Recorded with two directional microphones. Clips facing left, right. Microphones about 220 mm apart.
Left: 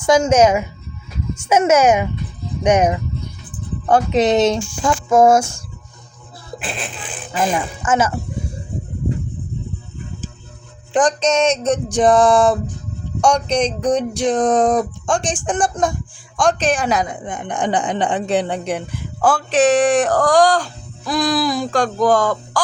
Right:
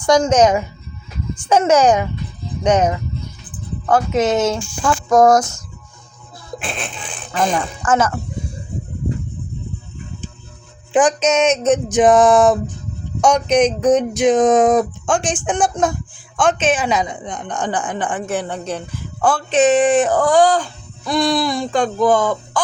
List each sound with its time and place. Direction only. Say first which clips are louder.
0.0 s a child's voice: even; 10° left (ahead or behind); by 5.3 s 25° left (ahead or behind)
6.6 s speech: even; 5° left (ahead or behind)
10.9 s a sound: right 1 dB; 5° right (ahead or behind)
15.3 s speech: right 1 dB; centre (ahead or behind)
17.4 s speech: left 3 dB; 15° left (ahead or behind)
19.2 s speech: even; centre (ahead or behind)